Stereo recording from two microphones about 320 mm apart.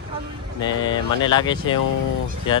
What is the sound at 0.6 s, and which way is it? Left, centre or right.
Speech, centre.